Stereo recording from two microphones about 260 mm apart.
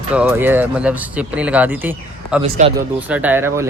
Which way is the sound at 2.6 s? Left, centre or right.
Right.